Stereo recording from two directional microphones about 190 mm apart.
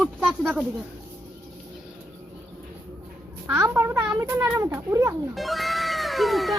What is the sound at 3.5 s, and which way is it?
A child's voice, 15° right (ahead or behind).